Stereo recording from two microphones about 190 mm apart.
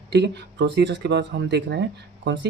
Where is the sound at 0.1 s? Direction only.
65° right (ahead or behind).